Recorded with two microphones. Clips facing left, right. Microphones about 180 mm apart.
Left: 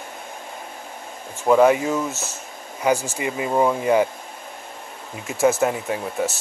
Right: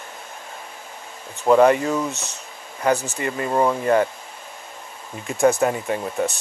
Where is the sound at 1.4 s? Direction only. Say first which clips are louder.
Right 1 dB; 5° left (ahead or behind).